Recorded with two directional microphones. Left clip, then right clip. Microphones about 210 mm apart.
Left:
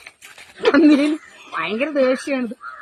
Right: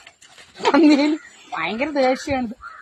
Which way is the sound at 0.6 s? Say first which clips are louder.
Left 1 dB; 30° right (ahead or behind).